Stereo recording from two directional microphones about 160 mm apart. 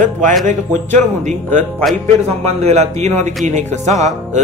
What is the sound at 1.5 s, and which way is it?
Speech, 10° left (ahead or behind).